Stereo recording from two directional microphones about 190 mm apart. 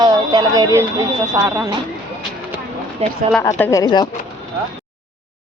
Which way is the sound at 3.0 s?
35° right (ahead or behind).